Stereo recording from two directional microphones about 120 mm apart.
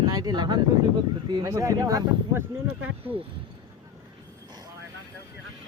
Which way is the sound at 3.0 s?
50° right (ahead or behind).